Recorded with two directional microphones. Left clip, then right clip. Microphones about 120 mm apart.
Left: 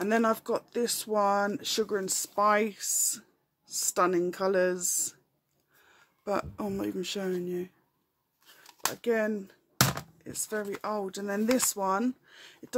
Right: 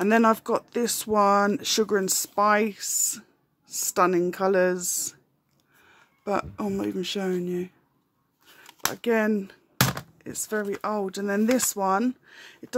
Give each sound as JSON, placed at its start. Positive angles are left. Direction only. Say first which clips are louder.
{"t": 0.0, "sound": "speech", "louder": "right 6 dB", "side_deg": -30}
{"t": 8.9, "sound": "speech", "louder": "right 5 dB", "side_deg": -35}
{"t": 9.8, "sound": "a sound", "louder": "right 2 dB", "side_deg": -30}
{"t": 10.8, "sound": "speech", "louder": "right 5 dB", "side_deg": -25}